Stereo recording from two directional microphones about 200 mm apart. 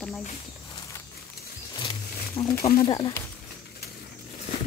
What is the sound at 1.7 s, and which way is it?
Wild animals, 25° left (ahead or behind).